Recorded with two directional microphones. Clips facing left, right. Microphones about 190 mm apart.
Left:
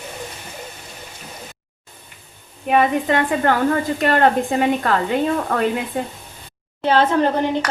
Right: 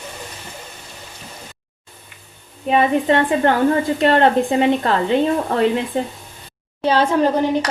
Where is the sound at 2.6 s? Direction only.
25° right (ahead or behind).